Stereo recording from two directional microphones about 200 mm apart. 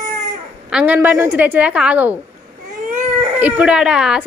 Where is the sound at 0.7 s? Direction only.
10° right (ahead or behind).